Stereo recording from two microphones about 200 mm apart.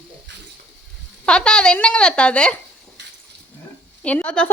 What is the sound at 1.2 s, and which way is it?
Speech, 5° left (ahead or behind).